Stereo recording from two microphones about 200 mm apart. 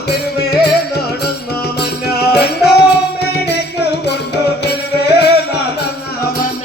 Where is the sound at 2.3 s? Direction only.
55° left (ahead or behind).